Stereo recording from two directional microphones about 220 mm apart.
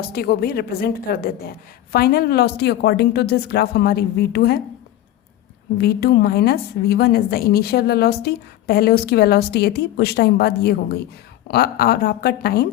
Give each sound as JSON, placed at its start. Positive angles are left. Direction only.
{"t": 0.0, "sound": "a woman's voice", "side_deg": 45}
{"t": 5.7, "sound": "a woman's voice", "side_deg": 45}